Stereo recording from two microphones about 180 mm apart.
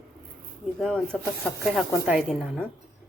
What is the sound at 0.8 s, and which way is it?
Speech, centre (ahead or behind).